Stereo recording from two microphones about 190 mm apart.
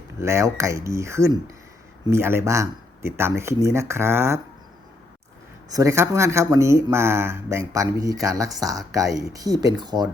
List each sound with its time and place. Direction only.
0.2 s speech: 15° right (ahead or behind)
5.6 s speech: 15° right (ahead or behind)